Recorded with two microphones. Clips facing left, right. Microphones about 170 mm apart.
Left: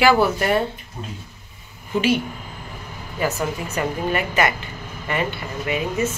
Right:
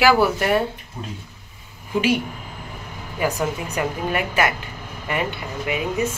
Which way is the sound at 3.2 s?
15° right (ahead or behind).